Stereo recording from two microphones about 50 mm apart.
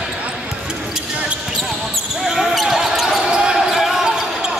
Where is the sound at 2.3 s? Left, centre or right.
Centre.